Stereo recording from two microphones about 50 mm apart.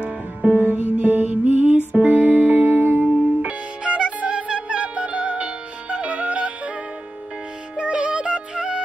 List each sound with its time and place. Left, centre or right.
0.7 s music: right
3.1 s music: right
7.7 s music: centre